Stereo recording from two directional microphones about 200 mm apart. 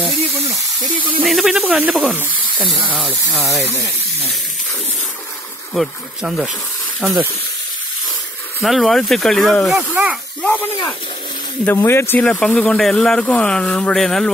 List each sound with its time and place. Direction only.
1.2 s speech: centre (ahead or behind)
2.5 s speech: 25° right (ahead or behind)
2.9 s speech: 5° right (ahead or behind)
5.8 s speech: centre (ahead or behind)
8.6 s speech: centre (ahead or behind)
9.8 s speech: 10° right (ahead or behind)
10.4 s speech: 10° left (ahead or behind)